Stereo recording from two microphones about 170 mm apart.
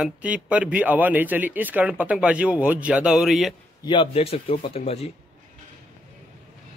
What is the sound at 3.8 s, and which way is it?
Speech, 30° left (ahead or behind).